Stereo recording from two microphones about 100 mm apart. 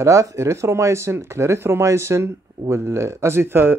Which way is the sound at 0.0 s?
30° right (ahead or behind).